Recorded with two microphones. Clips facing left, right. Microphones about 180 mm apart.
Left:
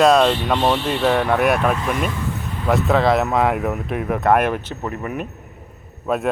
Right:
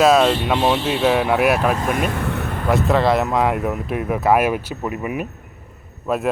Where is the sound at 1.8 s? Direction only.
50° right (ahead or behind).